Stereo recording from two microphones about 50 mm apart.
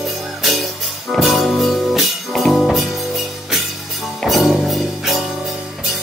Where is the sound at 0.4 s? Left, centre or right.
Centre.